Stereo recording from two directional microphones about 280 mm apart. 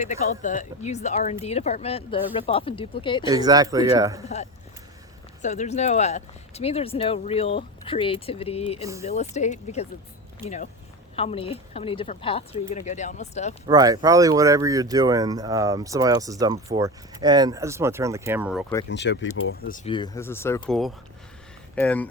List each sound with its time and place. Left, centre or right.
0.0 s speech: left
3.3 s speech: centre
5.4 s speech: left
8.8 s speech: centre
9.0 s speech: left
10.4 s speech: centre
11.2 s speech: left
13.7 s speech: centre
18.9 s speech: left
19.7 s speech: centre